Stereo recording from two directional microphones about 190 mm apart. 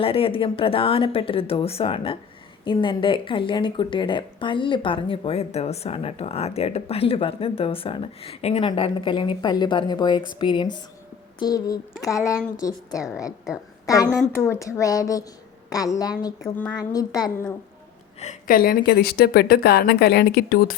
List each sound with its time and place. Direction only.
0.0 s a woman's voice: 30° left (ahead or behind)
16.4 s a woman's voice: 5° left (ahead or behind)
16.7 s speech: 20° left (ahead or behind)
18.2 s a woman's voice: 40° left (ahead or behind)